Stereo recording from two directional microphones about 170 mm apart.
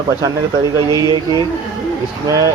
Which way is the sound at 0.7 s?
20° right (ahead or behind).